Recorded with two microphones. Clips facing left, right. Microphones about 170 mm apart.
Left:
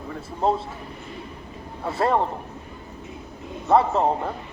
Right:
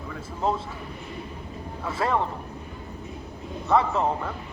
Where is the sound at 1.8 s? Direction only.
35° left (ahead or behind).